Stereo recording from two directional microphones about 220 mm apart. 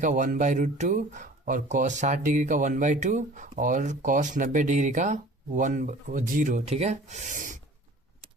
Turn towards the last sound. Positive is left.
turn(degrees=-35)  # may be behind; listen again after turning